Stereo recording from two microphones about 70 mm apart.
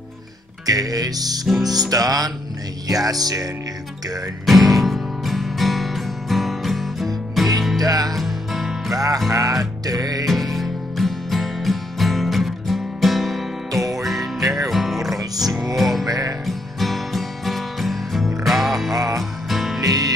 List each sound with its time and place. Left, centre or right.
0.7 s music: right
4.5 s music: centre
7.8 s music: right
8.1 s music: centre
8.9 s music: right
10.2 s music: centre
16.1 s music: right
16.4 s music: centre
19.8 s music: right